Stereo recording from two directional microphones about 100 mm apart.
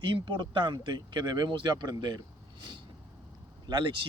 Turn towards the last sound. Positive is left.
turn(degrees=-50)  # may be behind; listen again after turning